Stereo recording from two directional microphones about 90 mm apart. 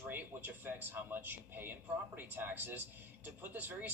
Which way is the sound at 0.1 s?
20° right (ahead or behind).